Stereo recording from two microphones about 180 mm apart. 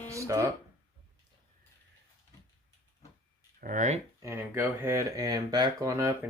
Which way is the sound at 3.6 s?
45° right (ahead or behind).